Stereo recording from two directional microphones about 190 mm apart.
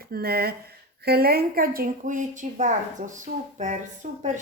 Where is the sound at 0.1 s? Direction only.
55° right (ahead or behind).